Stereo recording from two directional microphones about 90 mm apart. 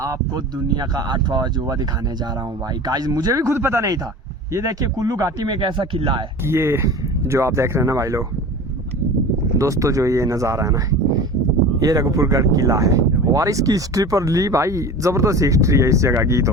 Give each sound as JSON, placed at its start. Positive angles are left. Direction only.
{"t": 0.0, "sound": "speech", "side_deg": -40}
{"t": 5.5, "sound": "speech", "side_deg": -60}
{"t": 6.4, "sound": "speech", "side_deg": -30}
{"t": 9.6, "sound": "speech", "side_deg": -35}